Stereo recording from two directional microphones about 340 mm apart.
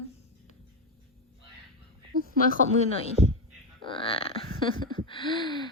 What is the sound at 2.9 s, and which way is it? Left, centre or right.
Speech, centre.